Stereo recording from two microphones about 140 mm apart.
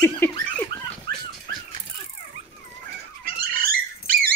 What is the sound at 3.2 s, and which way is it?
Dog, 90° right.